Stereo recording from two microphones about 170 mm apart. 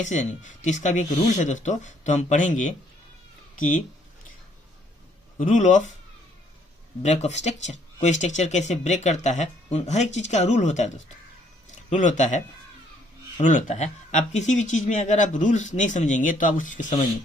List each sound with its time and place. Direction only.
0.0 s speech: 45° left (ahead or behind)
5.4 s speech: 45° left (ahead or behind)
7.0 s speech: 40° left (ahead or behind)
13.4 s speech: 45° left (ahead or behind)